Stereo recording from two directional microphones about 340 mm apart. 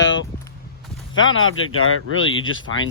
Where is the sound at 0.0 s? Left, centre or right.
Left.